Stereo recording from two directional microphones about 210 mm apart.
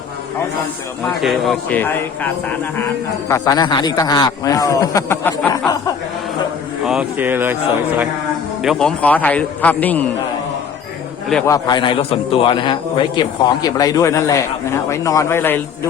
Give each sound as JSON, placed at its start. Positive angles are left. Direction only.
{"t": 1.0, "sound": "a man's voice", "side_deg": 0}
{"t": 6.8, "sound": "speech", "side_deg": -5}
{"t": 8.6, "sound": "a man's voice", "side_deg": 0}
{"t": 11.4, "sound": "a man's voice", "side_deg": 20}